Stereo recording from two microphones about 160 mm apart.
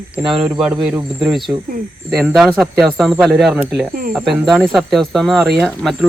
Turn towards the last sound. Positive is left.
turn(degrees=0)  # may be behind; listen again after turning